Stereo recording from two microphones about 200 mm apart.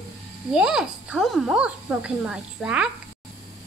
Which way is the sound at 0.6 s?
5° right (ahead or behind).